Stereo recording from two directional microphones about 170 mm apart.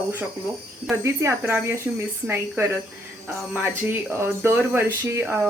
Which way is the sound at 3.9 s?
15° right (ahead or behind).